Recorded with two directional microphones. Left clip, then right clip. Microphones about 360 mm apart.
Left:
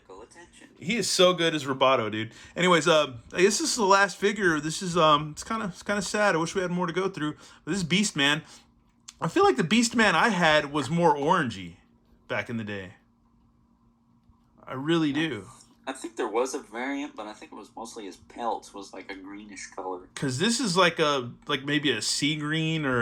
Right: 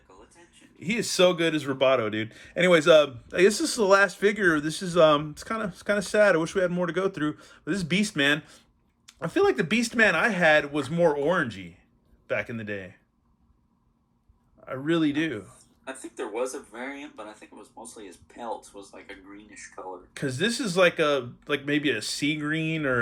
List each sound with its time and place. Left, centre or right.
0.8 s speech: centre
14.6 s speech: centre
16.0 s speech: left
17.5 s speech: left
20.1 s speech: centre